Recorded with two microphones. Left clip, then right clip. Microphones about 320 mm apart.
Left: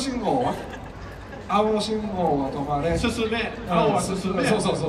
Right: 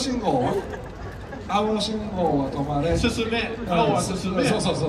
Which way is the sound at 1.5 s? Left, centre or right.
Centre.